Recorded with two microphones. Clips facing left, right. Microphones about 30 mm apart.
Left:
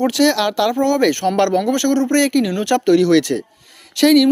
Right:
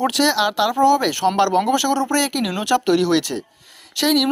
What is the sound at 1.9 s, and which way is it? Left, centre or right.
Speech, right.